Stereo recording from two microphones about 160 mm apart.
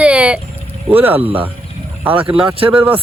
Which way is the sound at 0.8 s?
10° right (ahead or behind).